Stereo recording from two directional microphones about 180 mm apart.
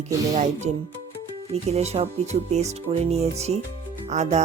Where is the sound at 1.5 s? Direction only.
35° right (ahead or behind).